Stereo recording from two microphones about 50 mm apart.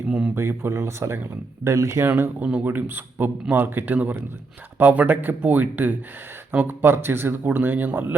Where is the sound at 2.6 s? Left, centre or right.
Right.